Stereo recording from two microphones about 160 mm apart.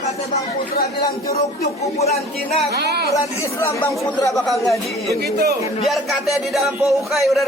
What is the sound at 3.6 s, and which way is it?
Speech, 20° left (ahead or behind).